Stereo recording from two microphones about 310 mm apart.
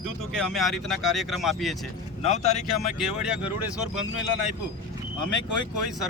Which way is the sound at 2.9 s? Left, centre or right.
Centre.